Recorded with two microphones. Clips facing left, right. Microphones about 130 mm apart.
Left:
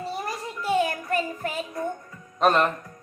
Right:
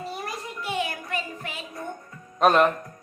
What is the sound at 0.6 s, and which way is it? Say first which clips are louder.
Music: left 6 dB; 40° left (ahead or behind).